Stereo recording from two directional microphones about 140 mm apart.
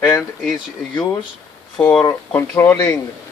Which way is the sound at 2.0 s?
30° left (ahead or behind).